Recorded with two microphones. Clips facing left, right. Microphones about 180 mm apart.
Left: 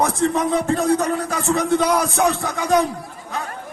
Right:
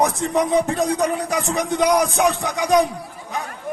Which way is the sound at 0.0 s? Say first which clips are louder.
Even; 15° right (ahead or behind).